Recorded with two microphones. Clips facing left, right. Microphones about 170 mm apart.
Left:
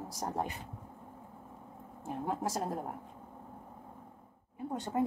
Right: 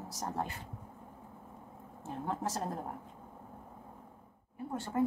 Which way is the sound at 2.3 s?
10° left (ahead or behind).